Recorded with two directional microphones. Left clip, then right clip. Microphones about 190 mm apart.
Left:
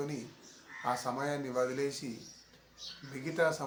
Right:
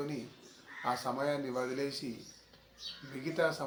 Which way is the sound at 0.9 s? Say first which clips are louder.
Right 1 dB; 25° left (ahead or behind).